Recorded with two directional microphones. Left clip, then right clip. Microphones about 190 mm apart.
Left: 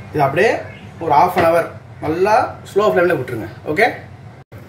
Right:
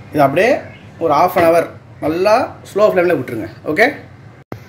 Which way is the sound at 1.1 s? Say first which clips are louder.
Right 1 dB; 55° right (ahead or behind).